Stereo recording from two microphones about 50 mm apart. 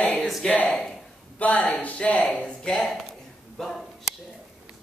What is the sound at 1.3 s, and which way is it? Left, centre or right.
Speech, left.